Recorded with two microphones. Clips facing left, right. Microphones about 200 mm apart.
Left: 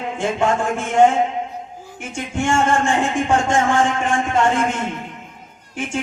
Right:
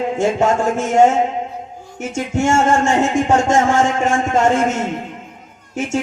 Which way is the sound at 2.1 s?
40° right (ahead or behind).